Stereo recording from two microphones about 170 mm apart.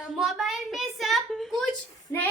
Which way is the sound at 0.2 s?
Centre (ahead or behind).